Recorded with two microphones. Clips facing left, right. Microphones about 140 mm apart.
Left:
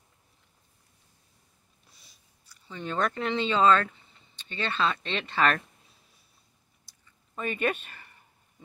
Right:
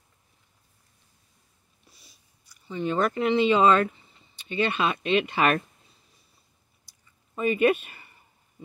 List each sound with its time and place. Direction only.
1.9 s chewing: centre (ahead or behind)
2.6 s speech: 5° right (ahead or behind)
7.3 s speech: 5° right (ahead or behind)